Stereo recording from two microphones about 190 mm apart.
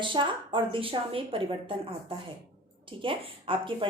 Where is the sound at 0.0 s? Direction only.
25° right (ahead or behind).